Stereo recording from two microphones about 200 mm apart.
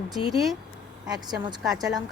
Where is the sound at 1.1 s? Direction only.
20° right (ahead or behind).